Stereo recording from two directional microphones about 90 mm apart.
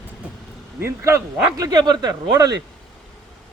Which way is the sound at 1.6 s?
50° right (ahead or behind).